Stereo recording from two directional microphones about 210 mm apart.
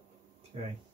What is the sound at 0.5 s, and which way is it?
Speech, 30° right (ahead or behind).